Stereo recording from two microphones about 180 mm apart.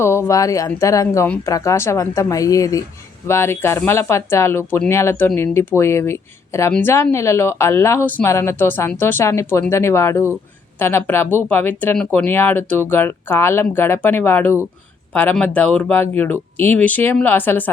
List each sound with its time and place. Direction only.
0.0 s speech: 15° left (ahead or behind)